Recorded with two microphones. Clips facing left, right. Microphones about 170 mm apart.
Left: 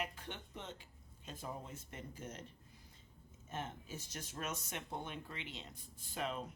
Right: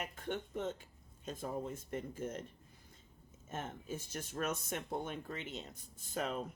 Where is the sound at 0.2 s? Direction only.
50° right (ahead or behind).